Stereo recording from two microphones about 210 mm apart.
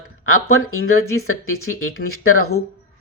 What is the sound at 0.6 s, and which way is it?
Speech, 85° left.